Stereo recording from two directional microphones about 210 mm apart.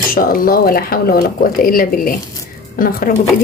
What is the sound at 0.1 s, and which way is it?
Speech, 45° left (ahead or behind).